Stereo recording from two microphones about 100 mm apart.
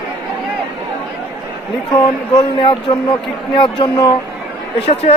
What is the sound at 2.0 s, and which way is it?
Speech, 40° left (ahead or behind).